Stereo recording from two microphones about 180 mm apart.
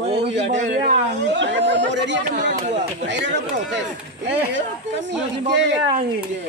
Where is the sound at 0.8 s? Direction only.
75° right (ahead or behind).